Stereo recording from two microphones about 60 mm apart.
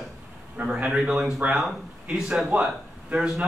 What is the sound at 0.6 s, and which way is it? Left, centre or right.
Speech, right.